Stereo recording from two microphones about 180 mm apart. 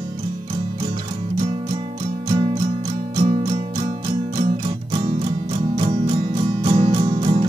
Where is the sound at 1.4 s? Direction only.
30° right (ahead or behind).